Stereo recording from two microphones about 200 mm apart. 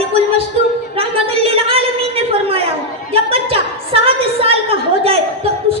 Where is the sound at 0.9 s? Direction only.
30° right (ahead or behind).